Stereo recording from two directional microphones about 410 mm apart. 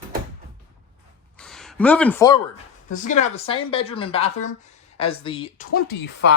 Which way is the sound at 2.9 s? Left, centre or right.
Centre.